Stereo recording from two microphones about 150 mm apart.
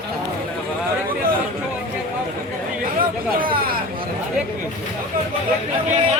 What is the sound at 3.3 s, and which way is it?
Speech, 75° right (ahead or behind).